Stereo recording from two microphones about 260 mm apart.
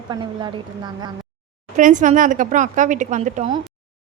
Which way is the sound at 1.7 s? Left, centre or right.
Right.